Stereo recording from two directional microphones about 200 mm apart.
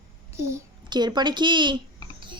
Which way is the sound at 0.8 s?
20° right (ahead or behind).